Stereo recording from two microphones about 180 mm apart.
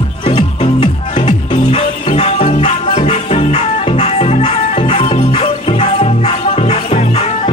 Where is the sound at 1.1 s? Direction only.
40° left (ahead or behind).